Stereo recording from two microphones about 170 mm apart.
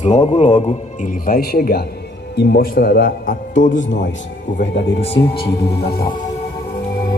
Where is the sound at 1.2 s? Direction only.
60° left (ahead or behind).